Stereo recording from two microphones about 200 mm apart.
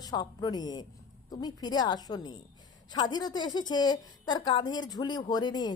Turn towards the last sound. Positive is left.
turn(degrees=20)  # may be behind; listen again after turning